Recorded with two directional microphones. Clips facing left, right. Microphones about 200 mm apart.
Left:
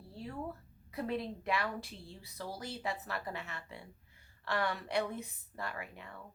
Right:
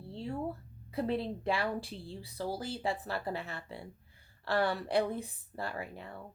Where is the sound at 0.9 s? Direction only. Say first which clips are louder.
Right 4 dB; 30° right (ahead or behind).